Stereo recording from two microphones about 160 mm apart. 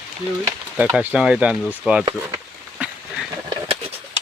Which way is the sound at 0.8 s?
10° right (ahead or behind).